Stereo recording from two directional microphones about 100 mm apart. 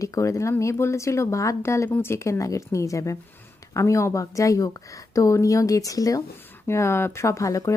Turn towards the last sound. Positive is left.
turn(degrees=30)  # may be behind; listen again after turning